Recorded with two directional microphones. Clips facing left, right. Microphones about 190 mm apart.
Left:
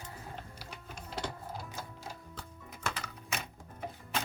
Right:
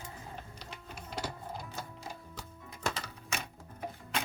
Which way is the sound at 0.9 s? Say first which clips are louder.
Even; 5° right (ahead or behind).